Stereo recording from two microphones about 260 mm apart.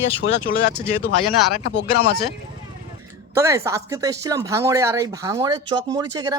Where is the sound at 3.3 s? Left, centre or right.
Centre.